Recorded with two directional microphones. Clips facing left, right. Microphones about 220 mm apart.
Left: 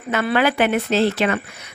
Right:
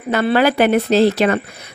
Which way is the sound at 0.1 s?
35° right (ahead or behind).